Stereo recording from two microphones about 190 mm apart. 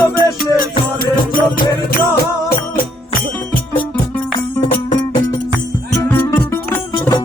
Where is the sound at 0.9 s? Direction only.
50° left (ahead or behind).